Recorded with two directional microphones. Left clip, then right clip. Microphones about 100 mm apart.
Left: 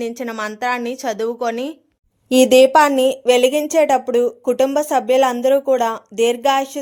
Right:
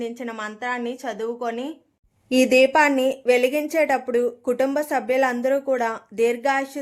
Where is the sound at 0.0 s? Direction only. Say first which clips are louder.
Left 6 dB; 45° left (ahead or behind).